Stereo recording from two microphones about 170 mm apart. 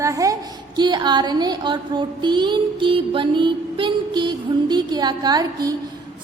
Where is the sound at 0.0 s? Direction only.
20° right (ahead or behind).